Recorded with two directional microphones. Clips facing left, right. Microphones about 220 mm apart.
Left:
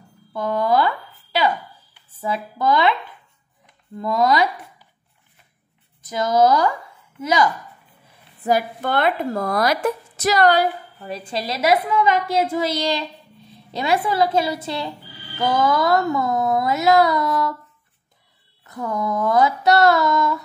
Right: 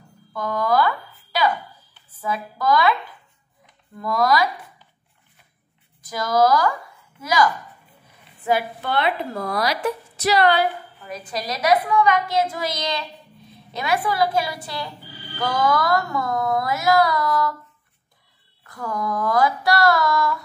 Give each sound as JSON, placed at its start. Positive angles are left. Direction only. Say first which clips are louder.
{"t": 0.3, "sound": "speech", "louder": "left 2 dB", "side_deg": 25}
{"t": 4.0, "sound": "speech", "louder": "left 2 dB", "side_deg": 25}
{"t": 6.0, "sound": "speech", "louder": "left 2 dB", "side_deg": 25}
{"t": 8.4, "sound": "speech", "louder": "left 2 dB", "side_deg": 40}
{"t": 11.2, "sound": "speech", "louder": "left 1 dB", "side_deg": 25}
{"t": 18.6, "sound": "speech", "louder": "left 3 dB", "side_deg": 20}